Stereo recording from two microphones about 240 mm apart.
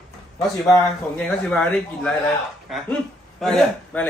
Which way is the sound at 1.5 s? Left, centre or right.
Centre.